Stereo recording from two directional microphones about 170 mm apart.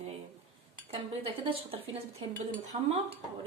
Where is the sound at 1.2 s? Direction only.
35° right (ahead or behind).